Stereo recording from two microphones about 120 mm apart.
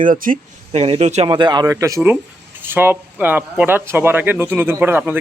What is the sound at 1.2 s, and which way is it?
Speech, 40° right (ahead or behind).